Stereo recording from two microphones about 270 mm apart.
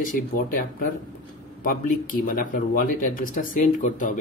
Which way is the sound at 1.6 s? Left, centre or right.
Left.